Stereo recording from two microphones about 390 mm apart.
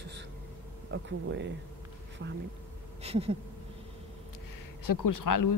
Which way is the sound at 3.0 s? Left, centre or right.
Centre.